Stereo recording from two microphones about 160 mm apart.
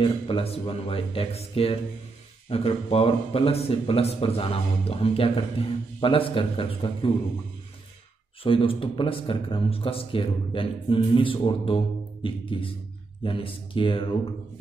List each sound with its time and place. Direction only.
0.0 s a man's voice: 35° left (ahead or behind)
8.5 s a man's voice: 35° left (ahead or behind)